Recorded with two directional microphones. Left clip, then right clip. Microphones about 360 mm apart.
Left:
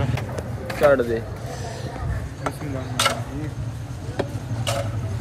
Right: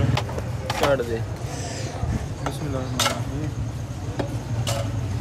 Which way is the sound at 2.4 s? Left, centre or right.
Centre.